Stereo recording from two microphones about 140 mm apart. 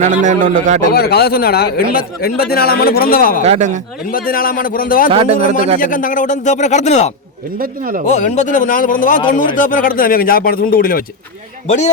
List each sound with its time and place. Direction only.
0.0 s a man's voice: 60° right (ahead or behind)
0.9 s speech: 90° left
3.4 s a man's voice: 55° right (ahead or behind)
4.1 s speech: 90° left
5.1 s speech: 40° right (ahead or behind)
5.8 s speech: 75° left (ahead or behind); by 7.1 s 55° left (ahead or behind)
7.6 s speech: 85° right
8.0 s speech: 55° left (ahead or behind); by 11.0 s 90° left